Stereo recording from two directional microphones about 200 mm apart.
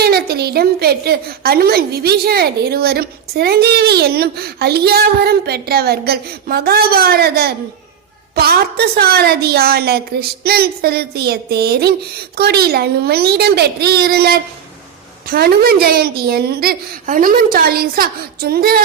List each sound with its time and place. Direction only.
0.0 s a woman's voice: 50° right (ahead or behind)